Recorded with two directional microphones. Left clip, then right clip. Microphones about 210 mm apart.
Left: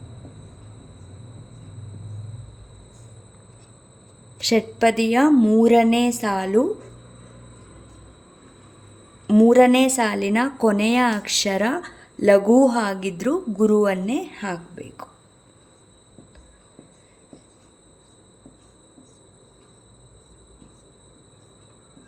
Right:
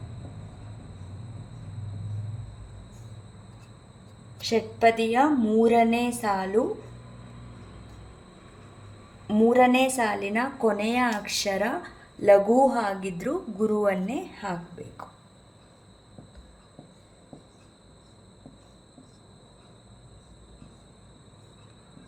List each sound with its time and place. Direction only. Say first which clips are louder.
4.4 s a woman's voice: left 5 dB; 50° left (ahead or behind)
9.2 s a woman's voice: left 5 dB; 45° left (ahead or behind)